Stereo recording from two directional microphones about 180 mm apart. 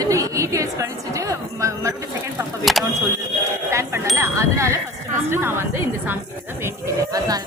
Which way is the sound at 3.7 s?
15° right (ahead or behind).